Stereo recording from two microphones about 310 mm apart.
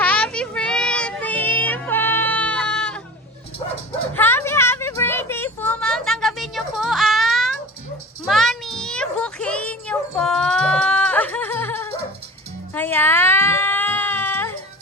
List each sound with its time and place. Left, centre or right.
0.0 s child singing: centre
4.1 s a sound: centre
12.7 s baby cry: centre